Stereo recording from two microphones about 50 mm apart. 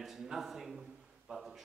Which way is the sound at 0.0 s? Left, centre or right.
Centre.